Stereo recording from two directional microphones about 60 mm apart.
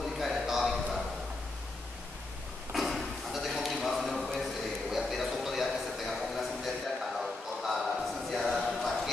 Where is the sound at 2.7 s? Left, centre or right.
Centre.